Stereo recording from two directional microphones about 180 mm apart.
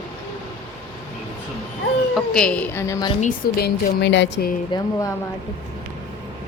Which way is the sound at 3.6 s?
75° left (ahead or behind).